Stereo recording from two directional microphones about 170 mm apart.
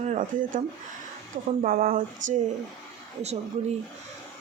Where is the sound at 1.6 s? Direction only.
55° right (ahead or behind).